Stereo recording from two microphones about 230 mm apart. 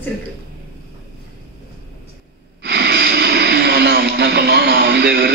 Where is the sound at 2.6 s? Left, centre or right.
Right.